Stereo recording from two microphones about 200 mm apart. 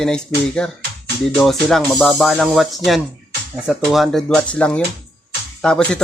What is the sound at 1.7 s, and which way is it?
Speech, centre (ahead or behind).